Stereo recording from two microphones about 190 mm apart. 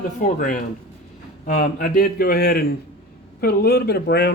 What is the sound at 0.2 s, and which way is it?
Speech, 45° left (ahead or behind).